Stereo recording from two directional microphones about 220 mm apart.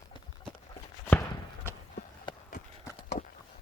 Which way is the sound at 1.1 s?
10° left (ahead or behind).